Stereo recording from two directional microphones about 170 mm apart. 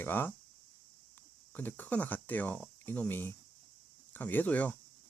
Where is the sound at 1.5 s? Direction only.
10° left (ahead or behind).